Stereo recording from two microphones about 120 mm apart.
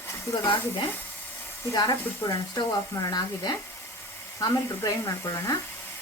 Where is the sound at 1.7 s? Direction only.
30° left (ahead or behind).